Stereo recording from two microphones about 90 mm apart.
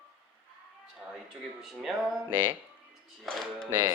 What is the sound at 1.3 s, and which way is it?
Speech, 5° right (ahead or behind).